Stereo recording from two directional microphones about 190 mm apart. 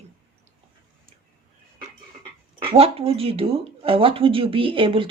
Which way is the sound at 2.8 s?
30° right (ahead or behind).